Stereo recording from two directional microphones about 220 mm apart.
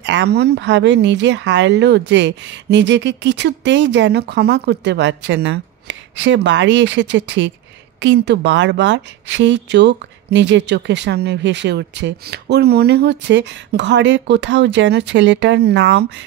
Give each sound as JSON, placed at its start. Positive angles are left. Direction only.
{"t": 0.0, "sound": "a woman's voice", "side_deg": -55}